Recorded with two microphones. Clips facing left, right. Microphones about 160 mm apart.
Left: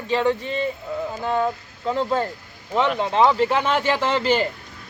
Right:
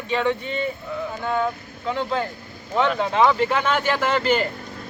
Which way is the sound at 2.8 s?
Centre (ahead or behind).